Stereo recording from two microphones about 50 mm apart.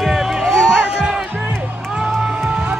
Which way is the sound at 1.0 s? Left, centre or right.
Centre.